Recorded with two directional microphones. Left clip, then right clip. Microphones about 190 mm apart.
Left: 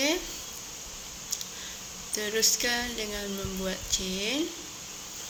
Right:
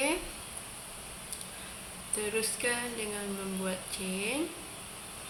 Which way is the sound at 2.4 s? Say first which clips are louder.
Left 6 dB; 25° left (ahead or behind).